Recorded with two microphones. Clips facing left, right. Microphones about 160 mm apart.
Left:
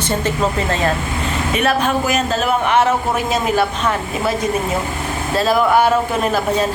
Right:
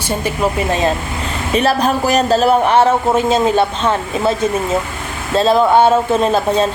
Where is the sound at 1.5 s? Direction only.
35° right (ahead or behind).